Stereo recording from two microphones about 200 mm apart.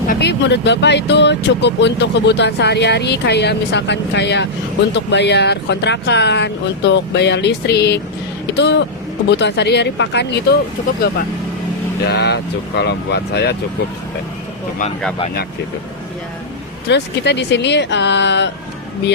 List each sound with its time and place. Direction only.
0.1 s speech: 55° left (ahead or behind)
12.0 s speech: 55° left (ahead or behind)
16.9 s speech: 60° left (ahead or behind)